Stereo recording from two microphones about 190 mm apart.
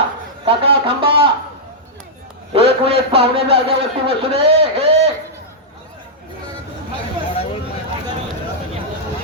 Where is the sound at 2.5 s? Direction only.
30° right (ahead or behind).